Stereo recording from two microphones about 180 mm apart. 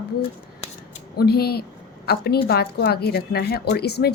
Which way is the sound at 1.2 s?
60° left (ahead or behind).